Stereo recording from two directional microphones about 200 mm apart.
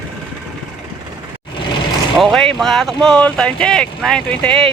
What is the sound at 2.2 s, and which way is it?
Speech, centre (ahead or behind).